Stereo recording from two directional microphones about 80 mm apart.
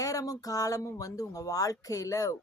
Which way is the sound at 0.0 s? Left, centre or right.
Left.